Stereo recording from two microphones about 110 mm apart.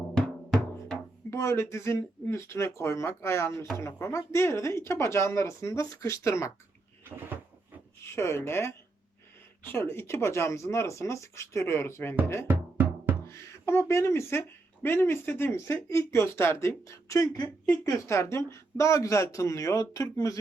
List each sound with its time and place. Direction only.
0.1 s drum: 5° left (ahead or behind)
1.3 s speech: 25° left (ahead or behind)
8.0 s speech: 25° left (ahead or behind)
12.5 s music: 15° right (ahead or behind)
13.2 s speech: 25° left (ahead or behind)